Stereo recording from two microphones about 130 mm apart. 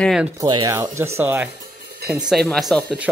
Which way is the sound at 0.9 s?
20° right (ahead or behind).